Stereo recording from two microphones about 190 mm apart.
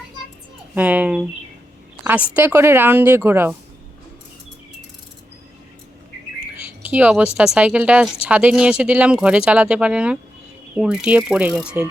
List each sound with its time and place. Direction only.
0.7 s speech: 10° right (ahead or behind)
6.8 s speech: 5° right (ahead or behind)